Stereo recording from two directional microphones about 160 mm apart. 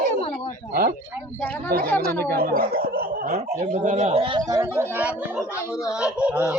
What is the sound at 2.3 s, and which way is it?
Speech, 65° right (ahead or behind).